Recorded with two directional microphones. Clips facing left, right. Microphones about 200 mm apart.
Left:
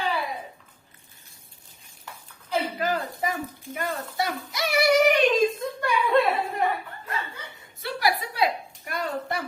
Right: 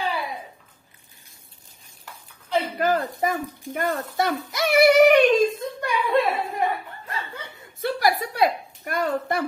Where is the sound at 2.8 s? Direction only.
50° right (ahead or behind).